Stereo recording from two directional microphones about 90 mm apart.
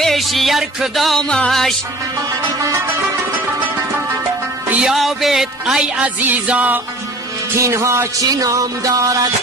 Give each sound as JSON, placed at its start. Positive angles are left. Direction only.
{"t": 0.0, "sound": "music", "side_deg": 0}
{"t": 4.6, "sound": "music", "side_deg": -15}
{"t": 4.9, "sound": "music", "side_deg": 0}
{"t": 6.0, "sound": "music", "side_deg": -15}
{"t": 7.5, "sound": "music", "side_deg": -30}